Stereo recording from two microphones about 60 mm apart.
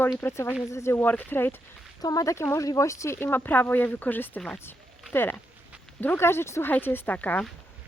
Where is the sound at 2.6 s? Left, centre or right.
Left.